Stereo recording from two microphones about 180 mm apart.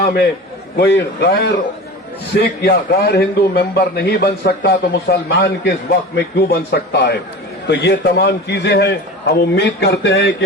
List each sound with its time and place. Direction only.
0.0 s a man's voice: 60° left (ahead or behind)